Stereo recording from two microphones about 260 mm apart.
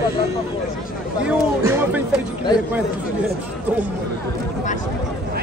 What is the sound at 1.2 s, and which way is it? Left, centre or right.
Speech, centre.